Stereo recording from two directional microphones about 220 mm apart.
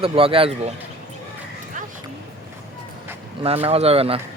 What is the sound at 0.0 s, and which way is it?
Speech, 25° right (ahead or behind).